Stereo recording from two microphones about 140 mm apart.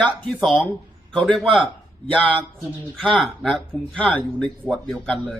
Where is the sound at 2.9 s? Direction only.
5° left (ahead or behind).